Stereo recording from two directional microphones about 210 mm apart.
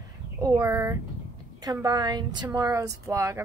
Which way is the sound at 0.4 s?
15° right (ahead or behind).